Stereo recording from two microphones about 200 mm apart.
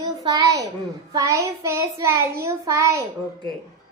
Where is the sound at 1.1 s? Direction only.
15° right (ahead or behind).